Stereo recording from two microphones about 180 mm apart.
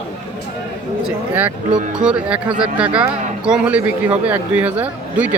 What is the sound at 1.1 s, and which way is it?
Speech, 10° right (ahead or behind).